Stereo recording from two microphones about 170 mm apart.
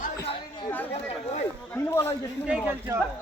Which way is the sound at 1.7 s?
15° left (ahead or behind).